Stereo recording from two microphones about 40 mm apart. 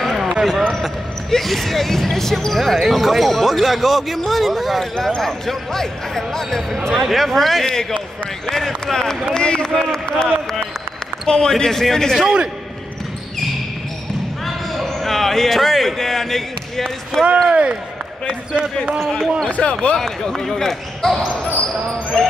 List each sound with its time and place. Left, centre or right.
0.0 s basketball bounce: centre
1.3 s speech: centre
4.9 s speech: centre
11.5 s speech: centre
14.4 s speech: centre
17.5 s speech: right
18.9 s speech: centre
19.5 s speech: left
20.3 s speech: centre
21.5 s speech: left